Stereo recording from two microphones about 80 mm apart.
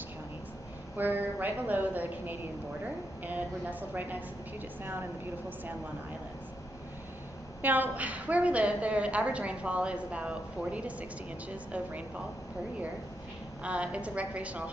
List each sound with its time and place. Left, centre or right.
0.9 s a woman's voice: right
3.9 s a woman's voice: right
7.6 s a woman's voice: right
13.6 s a woman's voice: centre